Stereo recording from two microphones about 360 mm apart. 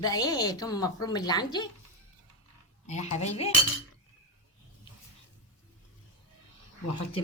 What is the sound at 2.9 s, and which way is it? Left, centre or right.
Speech, centre.